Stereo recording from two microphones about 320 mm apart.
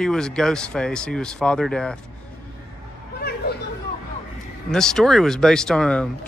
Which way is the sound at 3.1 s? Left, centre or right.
Left.